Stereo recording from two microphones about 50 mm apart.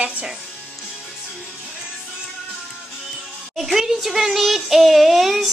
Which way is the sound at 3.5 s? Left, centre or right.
Centre.